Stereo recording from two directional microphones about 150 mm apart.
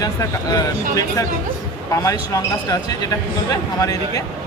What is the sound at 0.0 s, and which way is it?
Speech, 25° left (ahead or behind).